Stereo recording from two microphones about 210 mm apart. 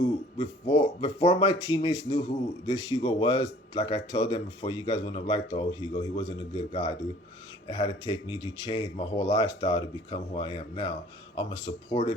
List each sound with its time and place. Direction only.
0.3 s a man's voice: 25° left (ahead or behind)